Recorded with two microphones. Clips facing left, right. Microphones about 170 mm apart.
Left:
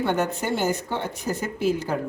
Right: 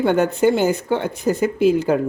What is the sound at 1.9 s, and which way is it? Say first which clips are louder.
Speech: right 9 dB; 65° right (ahead or behind).